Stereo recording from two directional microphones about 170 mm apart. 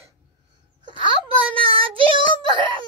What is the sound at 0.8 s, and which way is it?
A child's voice, 30° right (ahead or behind).